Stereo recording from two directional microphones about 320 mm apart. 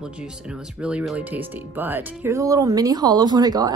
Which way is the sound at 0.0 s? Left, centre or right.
Centre.